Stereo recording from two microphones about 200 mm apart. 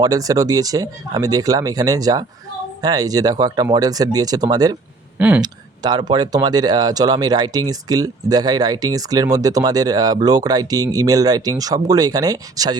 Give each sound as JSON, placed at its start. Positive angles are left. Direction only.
{"t": 0.0, "sound": "speech", "side_deg": -15}
{"t": 5.1, "sound": "speech", "side_deg": -10}
{"t": 5.4, "sound": "speech", "side_deg": -20}